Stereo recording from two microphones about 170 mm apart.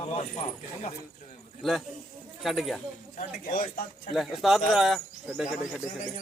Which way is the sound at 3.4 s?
55° left (ahead or behind).